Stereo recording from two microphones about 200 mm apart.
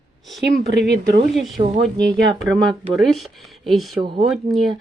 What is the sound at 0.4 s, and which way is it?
Speech, 60° right (ahead or behind).